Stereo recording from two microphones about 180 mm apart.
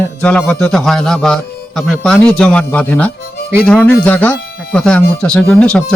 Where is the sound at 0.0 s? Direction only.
5° left (ahead or behind).